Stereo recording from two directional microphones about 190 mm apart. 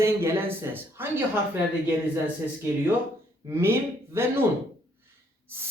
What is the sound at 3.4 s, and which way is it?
Speech, 15° right (ahead or behind).